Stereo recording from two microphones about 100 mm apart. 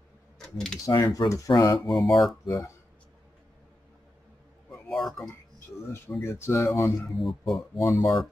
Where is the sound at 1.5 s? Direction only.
50° left (ahead or behind).